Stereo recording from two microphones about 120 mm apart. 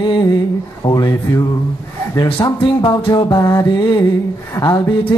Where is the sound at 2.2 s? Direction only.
45° left (ahead or behind).